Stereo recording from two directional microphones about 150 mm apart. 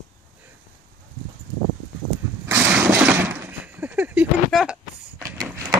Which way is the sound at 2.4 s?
20° right (ahead or behind).